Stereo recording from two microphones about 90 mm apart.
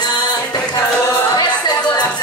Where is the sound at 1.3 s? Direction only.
50° left (ahead or behind).